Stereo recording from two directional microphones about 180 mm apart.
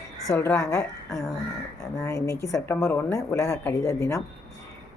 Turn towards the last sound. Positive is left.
turn(degrees=15)  # may be behind; listen again after turning